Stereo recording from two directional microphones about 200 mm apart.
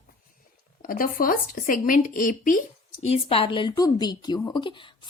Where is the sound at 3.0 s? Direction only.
30° left (ahead or behind).